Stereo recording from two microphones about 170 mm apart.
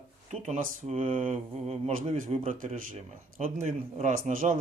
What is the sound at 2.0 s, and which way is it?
Speech, 35° right (ahead or behind).